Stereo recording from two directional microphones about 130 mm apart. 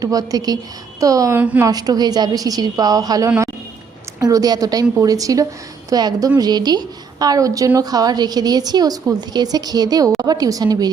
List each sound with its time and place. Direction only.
0.0 s a woman's voice: 30° right (ahead or behind)